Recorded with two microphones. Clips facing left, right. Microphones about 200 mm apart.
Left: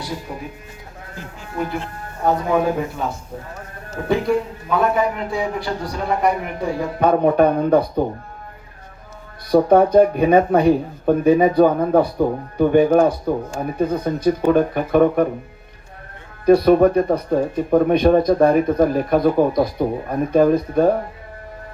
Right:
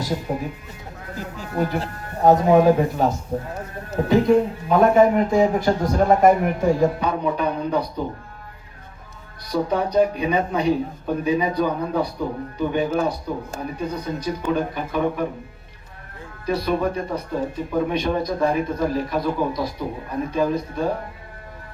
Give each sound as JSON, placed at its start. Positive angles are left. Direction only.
{"t": 0.3, "sound": "a man's voice", "side_deg": -40}
{"t": 7.0, "sound": "a man's voice", "side_deg": 55}
{"t": 9.5, "sound": "a man's voice", "side_deg": 55}
{"t": 16.5, "sound": "a man's voice", "side_deg": 50}